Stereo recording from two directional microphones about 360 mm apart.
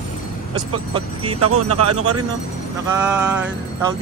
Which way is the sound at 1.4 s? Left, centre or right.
Right.